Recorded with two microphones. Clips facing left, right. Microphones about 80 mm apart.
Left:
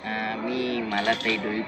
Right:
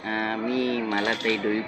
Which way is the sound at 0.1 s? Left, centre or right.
Right.